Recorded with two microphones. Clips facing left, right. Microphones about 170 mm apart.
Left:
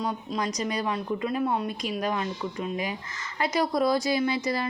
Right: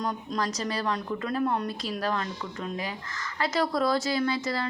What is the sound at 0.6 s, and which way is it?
A woman's voice, 15° left (ahead or behind).